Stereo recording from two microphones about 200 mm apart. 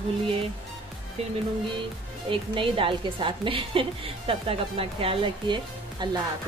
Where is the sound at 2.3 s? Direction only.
25° right (ahead or behind).